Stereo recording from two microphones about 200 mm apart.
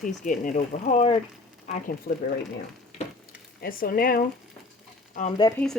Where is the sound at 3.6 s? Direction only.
45° left (ahead or behind).